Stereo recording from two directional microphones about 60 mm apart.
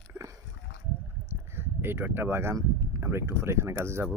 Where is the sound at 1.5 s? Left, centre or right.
Right.